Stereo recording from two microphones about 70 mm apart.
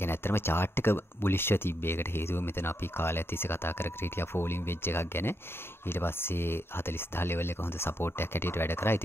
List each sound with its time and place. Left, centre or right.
0.0 s speech: left